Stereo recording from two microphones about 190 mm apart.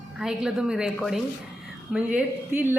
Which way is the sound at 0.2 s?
5° right (ahead or behind).